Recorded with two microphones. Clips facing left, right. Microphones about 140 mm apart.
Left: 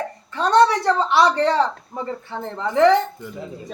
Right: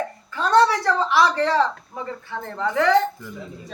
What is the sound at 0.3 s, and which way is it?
A woman's voice, 25° left (ahead or behind).